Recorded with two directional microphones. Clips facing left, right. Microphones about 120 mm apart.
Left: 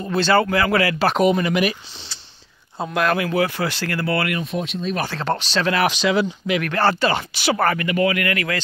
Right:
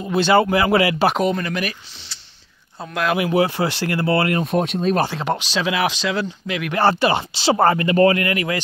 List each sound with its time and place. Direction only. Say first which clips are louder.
0.0 s speech: right 2 dB; 15° right (ahead or behind)
1.1 s speech: left 3 dB; 10° left (ahead or behind)
2.9 s speech: left 1 dB; centre (ahead or behind)
3.2 s speech: right 3 dB; 20° right (ahead or behind)
4.4 s speech: right 5 dB; 50° right (ahead or behind)
5.0 s speech: right 1 dB; 15° right (ahead or behind); by 6.6 s 5° left (ahead or behind)
6.6 s speech: right 3 dB; 20° right (ahead or behind)